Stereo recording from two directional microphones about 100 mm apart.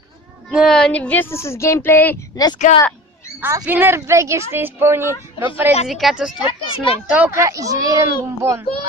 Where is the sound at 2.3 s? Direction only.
45° left (ahead or behind).